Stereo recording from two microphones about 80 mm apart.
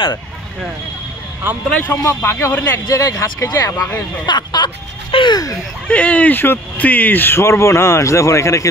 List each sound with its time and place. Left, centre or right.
1.5 s speech: right
2.0 s speech: left
3.0 s speech: left
4.3 s speech: left
5.1 s speech: left
5.9 s speech: centre; by 8.6 s left